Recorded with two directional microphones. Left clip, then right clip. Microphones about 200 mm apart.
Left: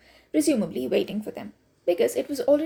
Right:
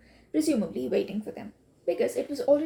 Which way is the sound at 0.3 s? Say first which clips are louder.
Left 3 dB; 40° left (ahead or behind).